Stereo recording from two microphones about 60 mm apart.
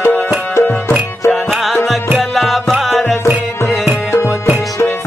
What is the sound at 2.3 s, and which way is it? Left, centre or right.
Music, centre.